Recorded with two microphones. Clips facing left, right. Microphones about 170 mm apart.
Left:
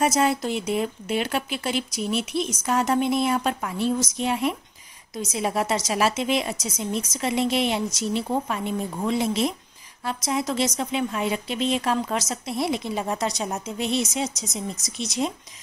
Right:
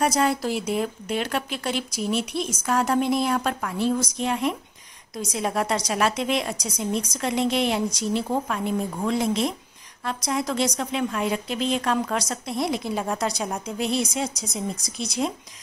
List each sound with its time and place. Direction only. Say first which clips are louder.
0.0 s speech: even; centre (ahead or behind)